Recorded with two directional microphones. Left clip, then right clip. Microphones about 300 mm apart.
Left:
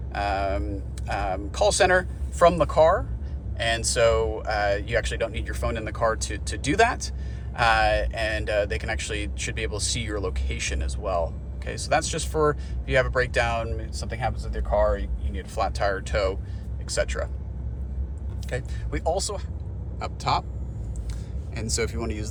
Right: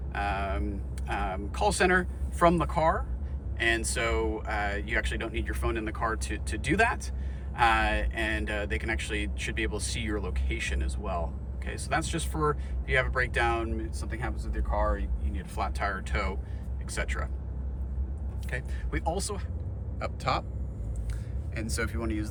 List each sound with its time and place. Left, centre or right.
0.1 s a sound: centre
1.0 s speech: centre
15.5 s speech: centre
18.5 s speech: centre
21.5 s speech: centre